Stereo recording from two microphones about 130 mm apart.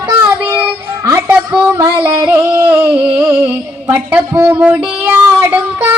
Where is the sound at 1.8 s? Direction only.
35° right (ahead or behind).